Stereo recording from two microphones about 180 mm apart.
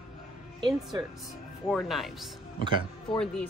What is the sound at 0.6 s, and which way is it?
Speech, 25° right (ahead or behind).